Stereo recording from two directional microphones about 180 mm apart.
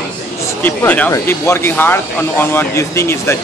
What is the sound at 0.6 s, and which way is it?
Speech, 10° left (ahead or behind).